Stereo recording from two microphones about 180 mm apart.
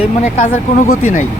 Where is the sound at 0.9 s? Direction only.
50° left (ahead or behind).